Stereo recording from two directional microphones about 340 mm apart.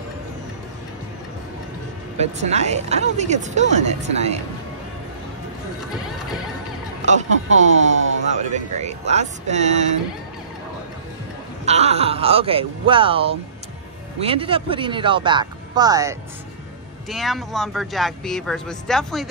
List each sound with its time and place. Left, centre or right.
2.1 s speech: centre
7.0 s speech: right
11.6 s speech: centre